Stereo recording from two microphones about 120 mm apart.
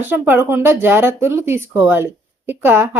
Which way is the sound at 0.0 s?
15° right (ahead or behind).